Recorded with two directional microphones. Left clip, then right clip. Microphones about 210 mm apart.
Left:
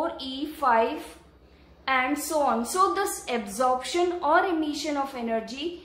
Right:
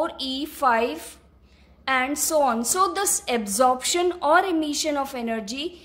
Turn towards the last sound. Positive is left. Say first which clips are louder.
# right 1 dB
turn(degrees=-50)  # may be behind; listen again after turning